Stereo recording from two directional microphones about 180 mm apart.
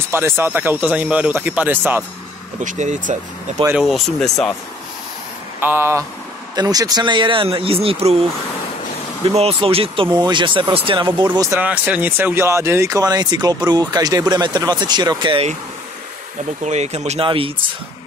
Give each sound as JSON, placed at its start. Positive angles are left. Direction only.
{"t": 0.1, "sound": "speech", "side_deg": -15}
{"t": 2.6, "sound": "speech", "side_deg": -45}
{"t": 3.6, "sound": "speech", "side_deg": -5}
{"t": 5.6, "sound": "speech", "side_deg": -10}
{"t": 11.6, "sound": "speech", "side_deg": -5}
{"t": 16.6, "sound": "speech", "side_deg": -40}